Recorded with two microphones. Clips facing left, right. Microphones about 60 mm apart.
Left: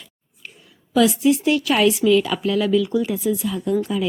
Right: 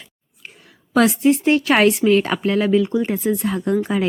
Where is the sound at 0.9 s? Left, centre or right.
Right.